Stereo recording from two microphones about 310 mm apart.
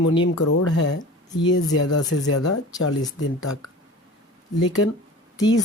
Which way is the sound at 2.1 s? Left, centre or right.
Left.